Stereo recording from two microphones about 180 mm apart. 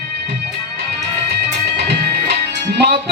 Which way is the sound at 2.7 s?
70° right (ahead or behind).